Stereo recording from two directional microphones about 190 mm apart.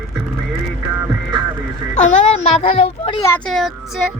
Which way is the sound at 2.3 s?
30° left (ahead or behind).